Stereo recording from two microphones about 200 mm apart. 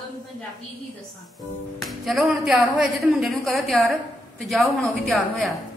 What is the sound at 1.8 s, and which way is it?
A woman's voice, centre (ahead or behind).